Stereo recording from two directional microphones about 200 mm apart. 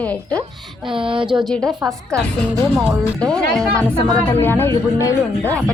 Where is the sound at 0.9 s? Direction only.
25° right (ahead or behind).